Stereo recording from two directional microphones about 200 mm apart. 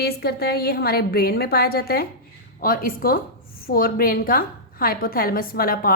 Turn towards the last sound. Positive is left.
turn(degrees=45)  # may be behind; listen again after turning